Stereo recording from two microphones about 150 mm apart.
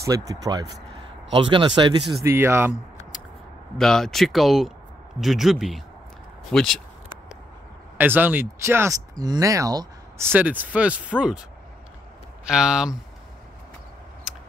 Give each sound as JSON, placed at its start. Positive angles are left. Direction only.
{"t": 0.0, "sound": "speech", "side_deg": -20}
{"t": 2.2, "sound": "speech", "side_deg": -15}
{"t": 3.7, "sound": "speech", "side_deg": 5}
{"t": 8.0, "sound": "speech", "side_deg": -10}
{"t": 12.4, "sound": "speech", "side_deg": -5}